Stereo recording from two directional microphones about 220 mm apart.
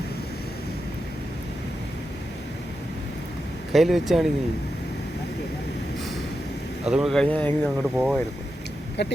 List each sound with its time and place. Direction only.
3.7 s speech: centre (ahead or behind)
6.8 s speech: centre (ahead or behind)
7.9 s speech: 5° right (ahead or behind)
9.0 s speech: 50° left (ahead or behind)